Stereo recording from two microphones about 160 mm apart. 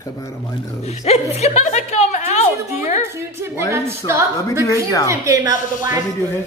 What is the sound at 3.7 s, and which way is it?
A woman's voice, 15° right (ahead or behind).